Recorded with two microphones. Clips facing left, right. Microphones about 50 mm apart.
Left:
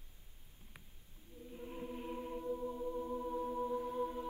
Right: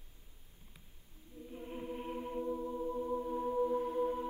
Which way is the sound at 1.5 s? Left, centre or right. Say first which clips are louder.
Right 3 dB; centre.